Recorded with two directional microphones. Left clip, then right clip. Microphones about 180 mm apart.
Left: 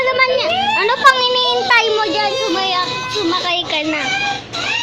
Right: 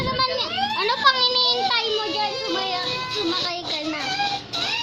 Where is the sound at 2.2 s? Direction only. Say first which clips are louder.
Left 8 dB; 35° left (ahead or behind).